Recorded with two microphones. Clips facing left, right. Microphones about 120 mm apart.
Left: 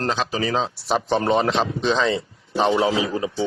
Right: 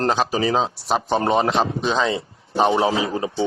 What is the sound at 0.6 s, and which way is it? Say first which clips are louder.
Speech: right 1 dB; 5° right (ahead or behind).